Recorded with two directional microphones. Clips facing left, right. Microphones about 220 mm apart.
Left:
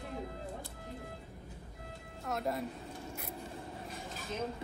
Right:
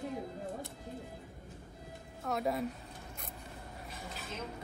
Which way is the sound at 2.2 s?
Centre (ahead or behind).